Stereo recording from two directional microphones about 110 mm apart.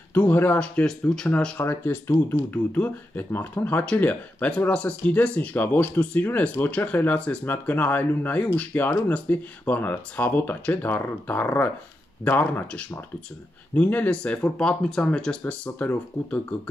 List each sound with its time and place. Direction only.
0.1 s speech: 15° left (ahead or behind)